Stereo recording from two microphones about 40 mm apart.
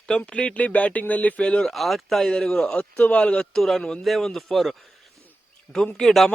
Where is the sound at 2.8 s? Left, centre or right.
Left.